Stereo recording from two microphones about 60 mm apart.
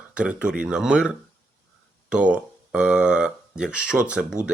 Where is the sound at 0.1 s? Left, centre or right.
Centre.